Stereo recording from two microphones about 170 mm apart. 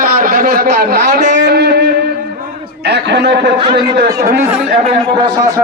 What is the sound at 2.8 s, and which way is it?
Speech, 90° right.